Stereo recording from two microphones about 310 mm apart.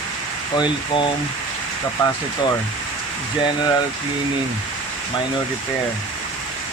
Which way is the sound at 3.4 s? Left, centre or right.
Centre.